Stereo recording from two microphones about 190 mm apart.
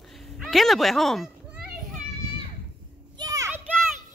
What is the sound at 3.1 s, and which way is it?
Children playing, 20° right (ahead or behind).